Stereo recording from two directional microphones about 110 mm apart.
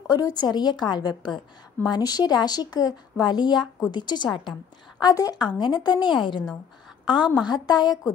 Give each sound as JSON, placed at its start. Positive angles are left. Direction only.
{"t": 0.0, "sound": "a woman's voice", "side_deg": 35}